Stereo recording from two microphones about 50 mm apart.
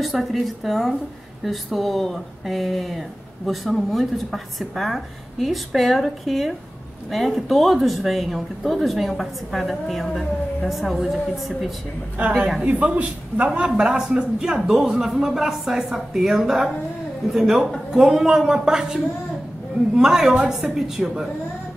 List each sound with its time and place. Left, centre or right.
0.0 s a woman's voice: centre
12.6 s a man's voice: right
13.7 s a man's voice: centre
20.0 s a man's voice: centre